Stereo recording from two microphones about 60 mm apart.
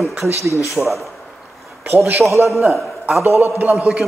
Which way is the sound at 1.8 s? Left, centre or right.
Right.